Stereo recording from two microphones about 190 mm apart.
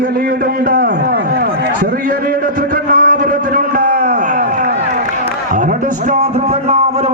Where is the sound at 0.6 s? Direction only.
55° right (ahead or behind).